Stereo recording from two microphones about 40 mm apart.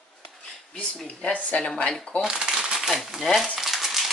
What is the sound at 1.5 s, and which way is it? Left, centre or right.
Speech, left.